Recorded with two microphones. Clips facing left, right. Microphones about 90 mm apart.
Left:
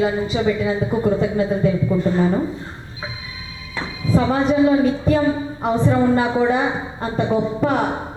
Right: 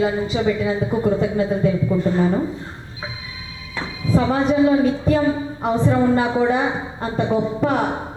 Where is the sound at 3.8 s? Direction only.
25° left (ahead or behind).